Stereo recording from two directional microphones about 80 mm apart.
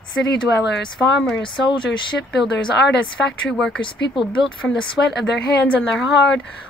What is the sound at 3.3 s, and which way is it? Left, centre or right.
Speech, centre.